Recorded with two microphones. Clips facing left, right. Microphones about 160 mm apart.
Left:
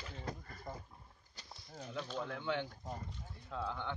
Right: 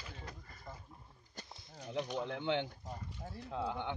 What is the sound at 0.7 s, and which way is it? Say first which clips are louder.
Speech: left 4 dB; 30° left (ahead or behind).